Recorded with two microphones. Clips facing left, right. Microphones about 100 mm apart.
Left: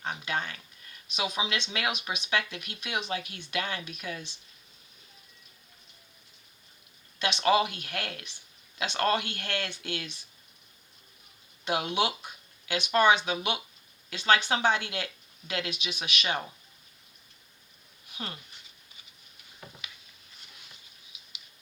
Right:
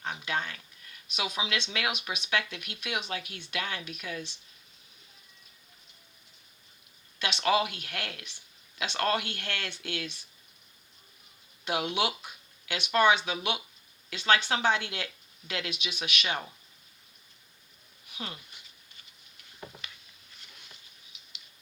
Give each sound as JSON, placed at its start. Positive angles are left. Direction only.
{"t": 0.1, "sound": "a sound", "side_deg": 20}
{"t": 1.1, "sound": "speech", "side_deg": 20}
{"t": 7.2, "sound": "speech", "side_deg": 20}
{"t": 11.6, "sound": "speech", "side_deg": 25}